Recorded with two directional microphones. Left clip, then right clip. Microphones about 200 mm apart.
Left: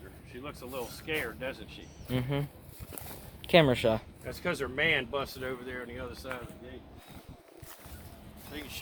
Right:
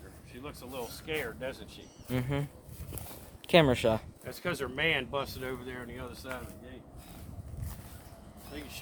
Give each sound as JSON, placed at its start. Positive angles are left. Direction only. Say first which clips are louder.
{"t": 0.4, "sound": "speech", "louder": "left 1 dB", "side_deg": -60}
{"t": 2.0, "sound": "speech", "louder": "left 1 dB", "side_deg": 5}
{"t": 4.3, "sound": "speech", "louder": "left 2 dB", "side_deg": -55}
{"t": 8.5, "sound": "speech", "louder": "left 2 dB", "side_deg": -20}